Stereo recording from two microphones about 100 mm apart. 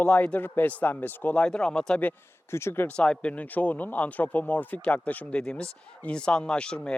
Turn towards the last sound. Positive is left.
turn(degrees=10)  # may be behind; listen again after turning